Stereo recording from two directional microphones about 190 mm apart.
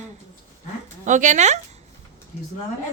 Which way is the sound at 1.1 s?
40° right (ahead or behind).